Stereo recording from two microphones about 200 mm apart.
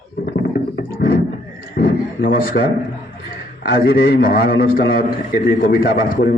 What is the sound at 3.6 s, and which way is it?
A man's voice, 50° left (ahead or behind).